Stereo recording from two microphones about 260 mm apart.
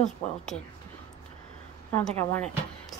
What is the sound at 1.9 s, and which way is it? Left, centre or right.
Speech, centre.